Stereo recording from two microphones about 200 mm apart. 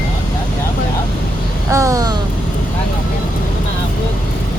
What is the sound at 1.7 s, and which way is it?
Vehicle, 15° right (ahead or behind).